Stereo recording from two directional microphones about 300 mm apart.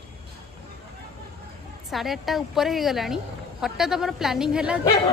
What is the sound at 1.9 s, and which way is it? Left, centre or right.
A woman's voice, centre.